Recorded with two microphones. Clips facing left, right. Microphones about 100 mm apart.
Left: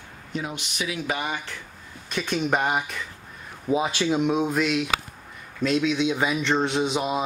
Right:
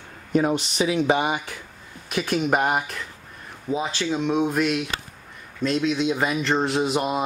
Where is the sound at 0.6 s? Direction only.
30° right (ahead or behind); by 3.1 s centre (ahead or behind).